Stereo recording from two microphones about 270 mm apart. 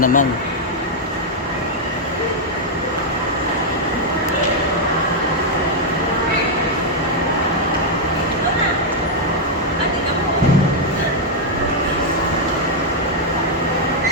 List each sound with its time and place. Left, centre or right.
0.0 s speech: left